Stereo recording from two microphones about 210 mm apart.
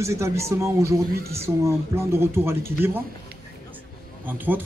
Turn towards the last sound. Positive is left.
turn(degrees=-10)  # may be behind; listen again after turning